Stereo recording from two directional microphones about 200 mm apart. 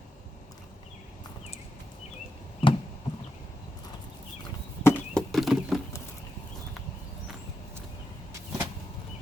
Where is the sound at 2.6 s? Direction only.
25° left (ahead or behind).